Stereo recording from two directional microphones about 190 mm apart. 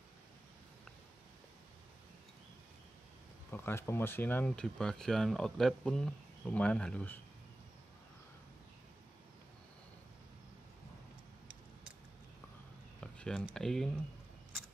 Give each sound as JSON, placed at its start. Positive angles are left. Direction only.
{"t": 3.5, "sound": "speech", "side_deg": 10}
{"t": 13.0, "sound": "speech", "side_deg": 5}